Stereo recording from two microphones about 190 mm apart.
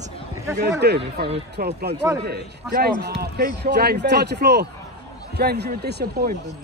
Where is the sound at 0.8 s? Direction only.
60° right (ahead or behind).